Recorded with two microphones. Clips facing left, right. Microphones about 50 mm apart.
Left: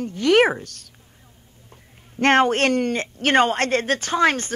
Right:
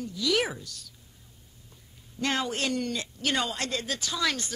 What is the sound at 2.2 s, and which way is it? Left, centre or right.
Speech, left.